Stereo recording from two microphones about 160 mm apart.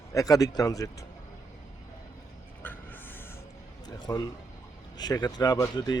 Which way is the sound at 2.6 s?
10° left (ahead or behind).